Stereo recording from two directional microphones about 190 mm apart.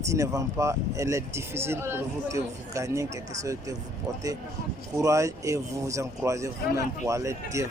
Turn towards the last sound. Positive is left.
turn(degrees=-15)  # may be behind; listen again after turning